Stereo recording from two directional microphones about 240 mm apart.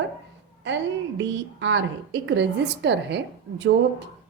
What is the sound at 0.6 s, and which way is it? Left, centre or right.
A woman's voice, right.